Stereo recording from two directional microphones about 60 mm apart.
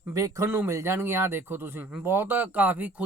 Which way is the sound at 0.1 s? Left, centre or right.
Right.